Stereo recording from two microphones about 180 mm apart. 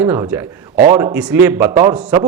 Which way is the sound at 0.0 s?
10° right (ahead or behind).